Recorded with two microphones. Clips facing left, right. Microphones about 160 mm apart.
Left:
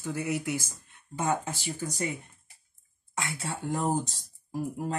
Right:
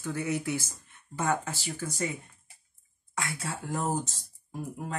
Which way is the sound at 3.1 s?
25° left (ahead or behind).